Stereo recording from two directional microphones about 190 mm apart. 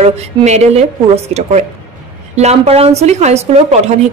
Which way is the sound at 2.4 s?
35° right (ahead or behind).